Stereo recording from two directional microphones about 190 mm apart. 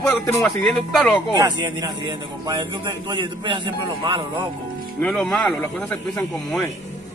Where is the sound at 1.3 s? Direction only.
20° right (ahead or behind).